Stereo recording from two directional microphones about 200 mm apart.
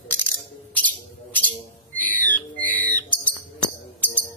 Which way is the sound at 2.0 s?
10° left (ahead or behind).